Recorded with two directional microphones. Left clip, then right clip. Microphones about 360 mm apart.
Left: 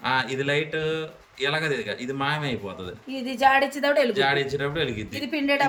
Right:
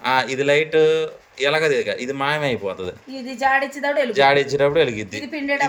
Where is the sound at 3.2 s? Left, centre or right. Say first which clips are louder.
Right 1 dB; centre.